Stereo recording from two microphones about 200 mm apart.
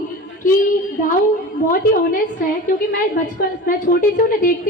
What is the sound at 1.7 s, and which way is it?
A woman's voice, 45° left (ahead or behind).